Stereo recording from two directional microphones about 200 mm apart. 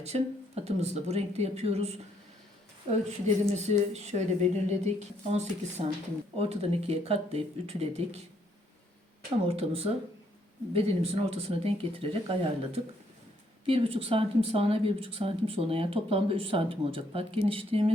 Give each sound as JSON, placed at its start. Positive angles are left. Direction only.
{"t": 0.0, "sound": "speech", "side_deg": -30}
{"t": 3.1, "sound": "speech", "side_deg": -35}
{"t": 9.5, "sound": "speech", "side_deg": -30}